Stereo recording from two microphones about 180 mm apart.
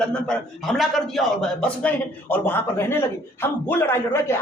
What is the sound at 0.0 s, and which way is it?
A man's voice, 5° left (ahead or behind).